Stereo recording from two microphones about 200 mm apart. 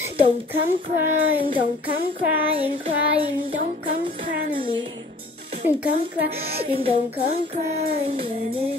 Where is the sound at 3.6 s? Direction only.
30° right (ahead or behind).